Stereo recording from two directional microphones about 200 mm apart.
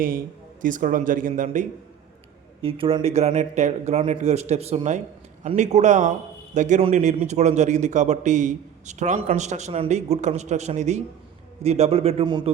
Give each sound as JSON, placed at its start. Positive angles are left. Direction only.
{"t": 0.6, "sound": "speech", "side_deg": -40}
{"t": 2.6, "sound": "speech", "side_deg": -25}